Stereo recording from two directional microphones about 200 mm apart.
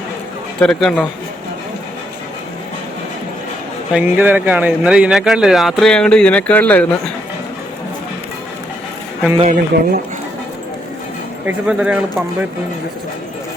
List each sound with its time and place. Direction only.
0.6 s speech: 5° left (ahead or behind)
3.9 s speech: 10° right (ahead or behind); by 7.1 s 10° left (ahead or behind)
9.4 s speech: 40° right (ahead or behind)
11.4 s speech: 5° right (ahead or behind)